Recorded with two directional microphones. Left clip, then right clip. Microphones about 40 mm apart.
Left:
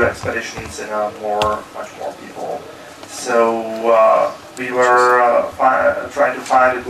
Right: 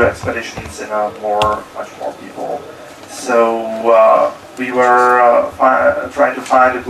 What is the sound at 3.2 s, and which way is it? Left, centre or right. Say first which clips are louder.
Speech: right 2 dB; centre.